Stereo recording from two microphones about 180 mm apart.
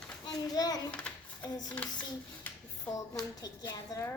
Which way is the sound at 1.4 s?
20° left (ahead or behind).